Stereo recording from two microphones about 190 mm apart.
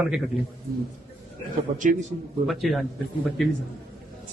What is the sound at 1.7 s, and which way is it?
Speech, 40° right (ahead or behind).